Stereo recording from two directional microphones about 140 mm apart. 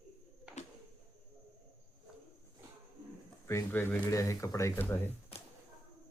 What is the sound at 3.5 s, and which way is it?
Speech, 15° left (ahead or behind).